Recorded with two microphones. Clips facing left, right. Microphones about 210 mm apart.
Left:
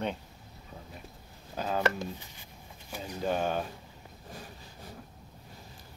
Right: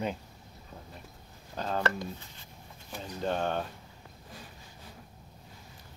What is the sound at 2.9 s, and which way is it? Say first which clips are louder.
Speech: left 1 dB; 5° left (ahead or behind).